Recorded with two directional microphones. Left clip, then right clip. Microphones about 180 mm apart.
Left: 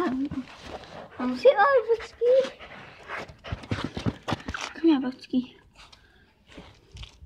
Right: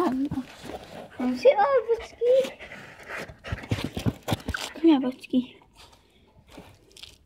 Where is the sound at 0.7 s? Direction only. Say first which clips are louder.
Left 1 dB; 30° right (ahead or behind).